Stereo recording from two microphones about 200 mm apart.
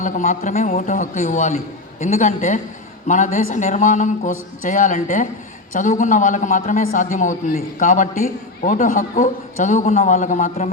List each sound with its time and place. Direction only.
0.0 s a man's voice: 40° left (ahead or behind)